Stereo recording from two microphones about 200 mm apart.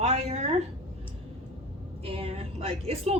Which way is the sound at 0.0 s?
35° right (ahead or behind).